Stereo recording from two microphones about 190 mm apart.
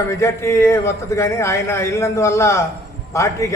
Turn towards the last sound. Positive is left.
turn(degrees=15)  # may be behind; listen again after turning